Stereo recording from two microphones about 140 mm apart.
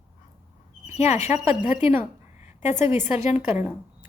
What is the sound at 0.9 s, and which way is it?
Speech, 55° left (ahead or behind).